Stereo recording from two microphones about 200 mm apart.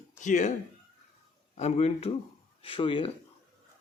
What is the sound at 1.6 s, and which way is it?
Speech, 35° left (ahead or behind).